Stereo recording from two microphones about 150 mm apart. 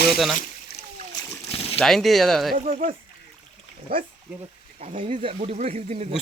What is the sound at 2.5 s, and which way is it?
Speech, 65° right (ahead or behind).